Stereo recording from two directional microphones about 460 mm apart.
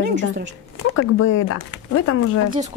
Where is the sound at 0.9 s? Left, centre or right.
Left.